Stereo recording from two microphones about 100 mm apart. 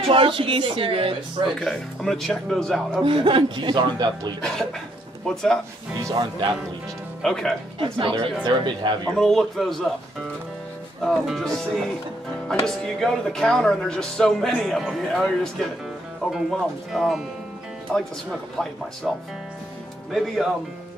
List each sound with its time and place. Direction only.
0.1 s speech: 60° right (ahead or behind)
1.6 s speech: 5° left (ahead or behind)
3.0 s speech: 60° right (ahead or behind)
4.4 s speech: 5° left (ahead or behind)
7.2 s speech: 5° left (ahead or behind)
7.8 s speech: 65° right (ahead or behind)
8.5 s speech: 50° right (ahead or behind)
9.1 s speech: 5° left (ahead or behind)
11.1 s speech: 5° left (ahead or behind)
19.1 s speech: centre (ahead or behind)